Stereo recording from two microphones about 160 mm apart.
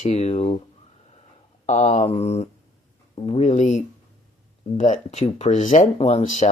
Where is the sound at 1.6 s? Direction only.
45° left (ahead or behind).